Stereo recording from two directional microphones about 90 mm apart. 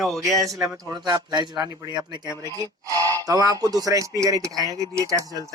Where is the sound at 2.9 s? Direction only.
25° left (ahead or behind).